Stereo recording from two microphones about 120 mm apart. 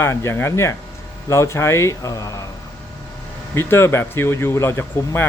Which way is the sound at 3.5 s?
20° left (ahead or behind).